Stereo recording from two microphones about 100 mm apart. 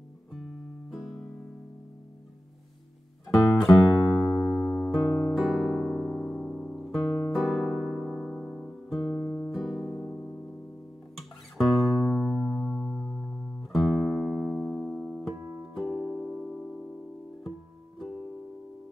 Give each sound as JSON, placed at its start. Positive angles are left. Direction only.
{"t": 0.9, "sound": "music", "side_deg": 0}
{"t": 3.3, "sound": "music", "side_deg": 0}
{"t": 5.3, "sound": "piano", "side_deg": 0}
{"t": 6.8, "sound": "music", "side_deg": 0}
{"t": 9.1, "sound": "guitar", "side_deg": 15}
{"t": 9.5, "sound": "music", "side_deg": 0}
{"t": 16.1, "sound": "music", "side_deg": 10}